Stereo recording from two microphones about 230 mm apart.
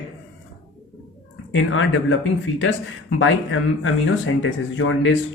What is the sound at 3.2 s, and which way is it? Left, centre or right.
Speech, left.